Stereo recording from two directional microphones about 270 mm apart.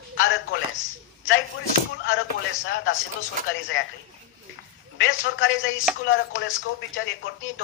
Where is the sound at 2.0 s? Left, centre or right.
Left.